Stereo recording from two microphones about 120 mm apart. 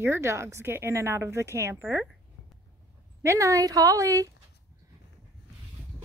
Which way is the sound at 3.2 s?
25° right (ahead or behind).